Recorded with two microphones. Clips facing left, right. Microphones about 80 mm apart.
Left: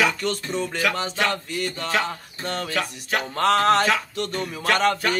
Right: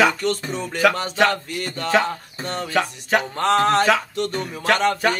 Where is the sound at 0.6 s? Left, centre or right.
Right.